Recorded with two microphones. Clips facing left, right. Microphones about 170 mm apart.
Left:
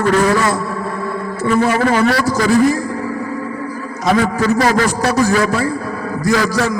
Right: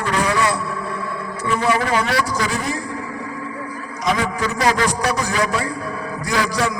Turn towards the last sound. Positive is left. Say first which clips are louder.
# left 5 dB
turn(degrees=45)  # may be behind; listen again after turning